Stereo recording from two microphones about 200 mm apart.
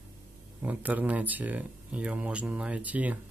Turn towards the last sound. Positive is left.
turn(degrees=-5)  # may be behind; listen again after turning